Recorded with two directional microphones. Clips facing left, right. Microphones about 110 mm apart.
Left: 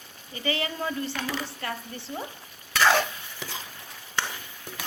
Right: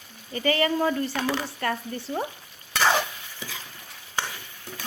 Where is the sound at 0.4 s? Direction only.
50° right (ahead or behind).